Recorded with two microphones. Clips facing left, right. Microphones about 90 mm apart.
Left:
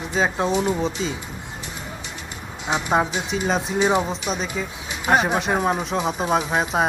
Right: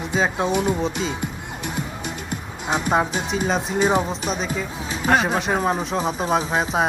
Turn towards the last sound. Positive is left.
turn(degrees=0)  # may be behind; listen again after turning